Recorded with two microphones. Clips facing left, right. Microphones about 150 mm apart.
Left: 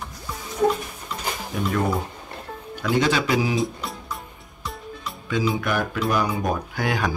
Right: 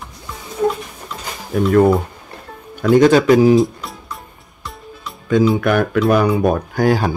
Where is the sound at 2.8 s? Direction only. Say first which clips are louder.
Right 11 dB; 50° right (ahead or behind).